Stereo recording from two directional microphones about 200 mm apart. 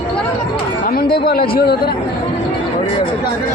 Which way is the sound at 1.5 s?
50° left (ahead or behind).